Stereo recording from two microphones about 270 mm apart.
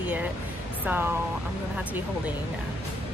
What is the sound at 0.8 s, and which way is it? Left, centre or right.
Speech, centre.